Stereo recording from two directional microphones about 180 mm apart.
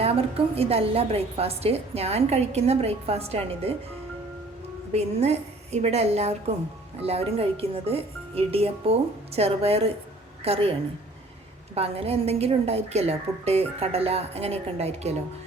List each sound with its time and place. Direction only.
0.0 s a woman's voice: 35° right (ahead or behind)
4.9 s a woman's voice: 35° right (ahead or behind)